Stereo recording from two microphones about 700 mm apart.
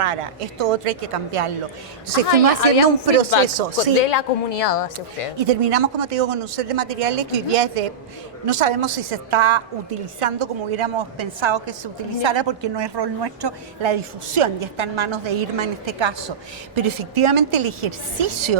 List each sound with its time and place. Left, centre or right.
0.0 s a woman's voice: right
2.3 s a woman's voice: left
3.4 s a woman's voice: right
4.0 s a woman's voice: left
5.5 s a woman's voice: right